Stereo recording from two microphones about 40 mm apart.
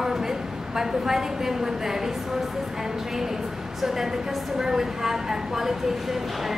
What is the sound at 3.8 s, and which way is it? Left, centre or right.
A woman's voice, centre.